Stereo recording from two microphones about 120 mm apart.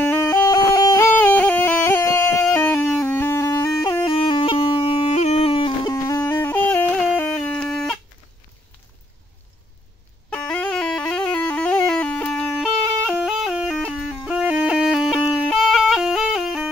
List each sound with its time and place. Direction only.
0.0 s music: 20° left (ahead or behind)
1.0 s music: 15° left (ahead or behind)
4.0 s music: 45° left (ahead or behind)
5.9 s music: 30° left (ahead or behind)
7.0 s a sound: 5° left (ahead or behind)
10.3 s music: 10° left (ahead or behind)